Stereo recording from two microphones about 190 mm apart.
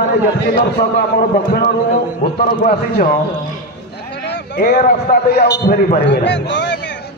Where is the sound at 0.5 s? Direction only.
60° left (ahead or behind).